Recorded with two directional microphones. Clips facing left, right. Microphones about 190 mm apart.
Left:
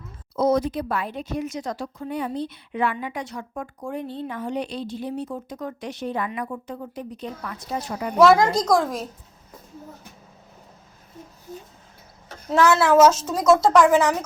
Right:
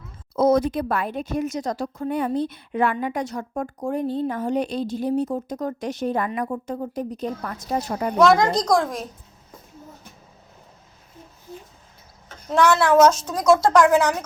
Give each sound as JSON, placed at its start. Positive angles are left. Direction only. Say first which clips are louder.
{"t": 0.3, "sound": "a woman's voice", "louder": "right 3 dB", "side_deg": -50}
{"t": 8.2, "sound": "a woman's voice", "louder": "left 1 dB", "side_deg": 5}
{"t": 12.5, "sound": "a woman's voice", "louder": "even", "side_deg": 5}